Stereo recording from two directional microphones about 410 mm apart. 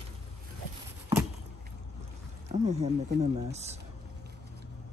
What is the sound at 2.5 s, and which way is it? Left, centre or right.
Speech, centre.